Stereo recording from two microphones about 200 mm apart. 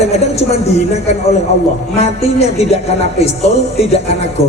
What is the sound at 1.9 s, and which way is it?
A woman's voice, 30° left (ahead or behind).